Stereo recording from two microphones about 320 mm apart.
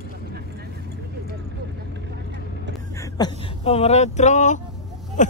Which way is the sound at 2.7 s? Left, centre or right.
Centre.